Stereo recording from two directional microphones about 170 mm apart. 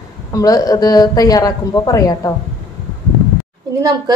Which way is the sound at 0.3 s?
20° left (ahead or behind).